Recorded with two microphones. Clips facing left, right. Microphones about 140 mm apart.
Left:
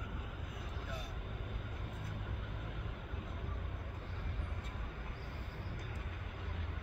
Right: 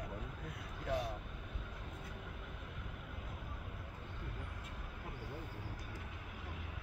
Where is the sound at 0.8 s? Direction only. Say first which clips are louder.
Right 12 dB; 80° right.